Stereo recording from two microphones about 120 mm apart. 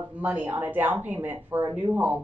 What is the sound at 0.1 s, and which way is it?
Speech, 15° right (ahead or behind).